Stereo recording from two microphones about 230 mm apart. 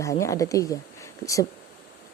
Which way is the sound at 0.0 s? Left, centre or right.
Centre.